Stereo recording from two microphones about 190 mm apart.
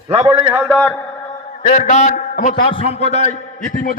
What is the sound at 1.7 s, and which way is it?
A man's voice, 40° left (ahead or behind).